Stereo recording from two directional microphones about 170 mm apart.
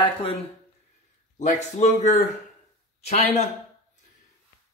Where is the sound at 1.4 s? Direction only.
45° left (ahead or behind).